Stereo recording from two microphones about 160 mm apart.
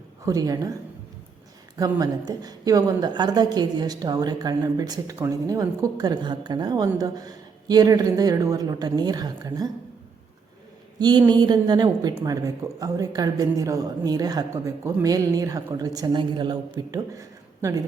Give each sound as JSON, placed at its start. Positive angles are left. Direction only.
{"t": 0.3, "sound": "a woman's voice", "side_deg": -20}
{"t": 1.8, "sound": "a woman's voice", "side_deg": -25}
{"t": 11.0, "sound": "a woman's voice", "side_deg": -25}